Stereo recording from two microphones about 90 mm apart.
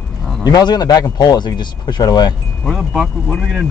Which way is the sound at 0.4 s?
45° left (ahead or behind).